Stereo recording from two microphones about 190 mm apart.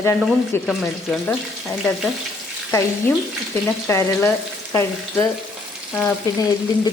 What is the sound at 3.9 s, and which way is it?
Speech, 15° left (ahead or behind).